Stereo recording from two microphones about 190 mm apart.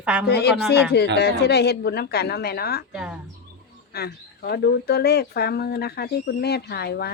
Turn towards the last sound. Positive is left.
turn(degrees=55)  # may be behind; listen again after turning